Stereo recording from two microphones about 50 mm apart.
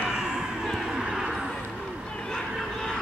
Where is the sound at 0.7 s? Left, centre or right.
Centre.